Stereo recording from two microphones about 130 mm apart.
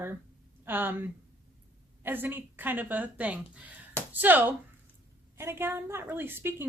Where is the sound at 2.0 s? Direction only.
15° right (ahead or behind).